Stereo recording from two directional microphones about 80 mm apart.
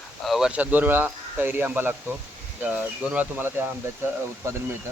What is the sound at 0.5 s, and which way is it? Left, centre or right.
Speech, right.